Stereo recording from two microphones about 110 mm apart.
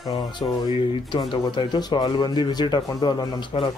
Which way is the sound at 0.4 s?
45° left (ahead or behind).